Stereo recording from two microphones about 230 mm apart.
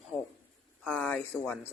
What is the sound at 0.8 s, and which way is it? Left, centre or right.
Speech, centre.